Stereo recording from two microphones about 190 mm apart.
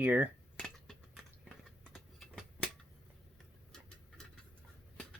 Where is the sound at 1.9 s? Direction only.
5° left (ahead or behind).